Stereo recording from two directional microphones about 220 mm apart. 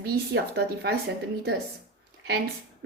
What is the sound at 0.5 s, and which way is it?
Speech, 50° right (ahead or behind).